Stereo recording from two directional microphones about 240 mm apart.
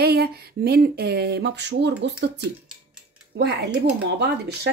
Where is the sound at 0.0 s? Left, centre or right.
Right.